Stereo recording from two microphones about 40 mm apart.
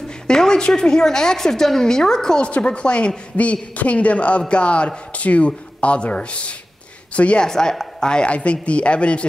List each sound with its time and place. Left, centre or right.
0.3 s a woman's voice: centre
2.4 s a man's voice: left
7.4 s a woman's voice: centre